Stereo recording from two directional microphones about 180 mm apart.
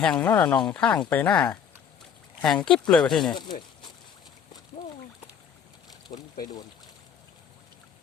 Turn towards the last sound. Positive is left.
turn(degrees=20)  # may be behind; listen again after turning